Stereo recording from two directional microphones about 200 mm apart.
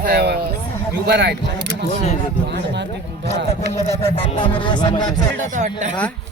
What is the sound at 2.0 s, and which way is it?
Speech, 35° left (ahead or behind).